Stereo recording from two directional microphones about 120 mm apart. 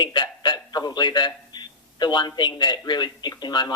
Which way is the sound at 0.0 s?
40° left (ahead or behind).